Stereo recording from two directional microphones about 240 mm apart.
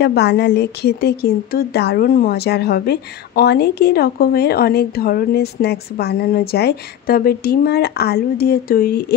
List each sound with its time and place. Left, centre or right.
0.0 s speech: left